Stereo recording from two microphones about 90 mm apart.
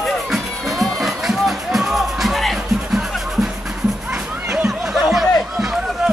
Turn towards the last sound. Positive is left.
turn(degrees=-5)  # may be behind; listen again after turning